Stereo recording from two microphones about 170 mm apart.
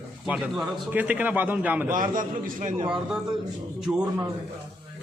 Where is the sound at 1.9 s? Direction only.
50° right (ahead or behind).